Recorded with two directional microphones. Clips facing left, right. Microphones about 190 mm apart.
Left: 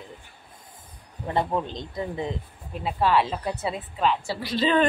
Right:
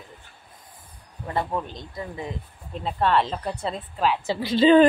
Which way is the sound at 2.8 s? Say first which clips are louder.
Even; 5° left (ahead or behind).